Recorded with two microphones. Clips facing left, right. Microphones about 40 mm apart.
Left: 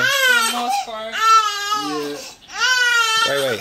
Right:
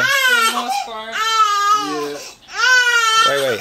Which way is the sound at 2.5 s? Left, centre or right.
Right.